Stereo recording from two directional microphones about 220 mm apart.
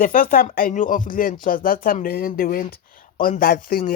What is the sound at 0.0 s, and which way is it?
Speech, 40° left (ahead or behind).